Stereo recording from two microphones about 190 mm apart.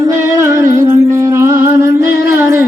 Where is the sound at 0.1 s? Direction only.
15° right (ahead or behind).